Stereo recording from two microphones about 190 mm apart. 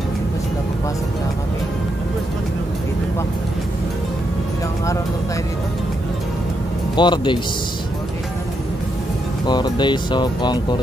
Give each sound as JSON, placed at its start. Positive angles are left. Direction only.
{"t": 7.0, "sound": "speech", "side_deg": 25}
{"t": 9.5, "sound": "speech", "side_deg": 25}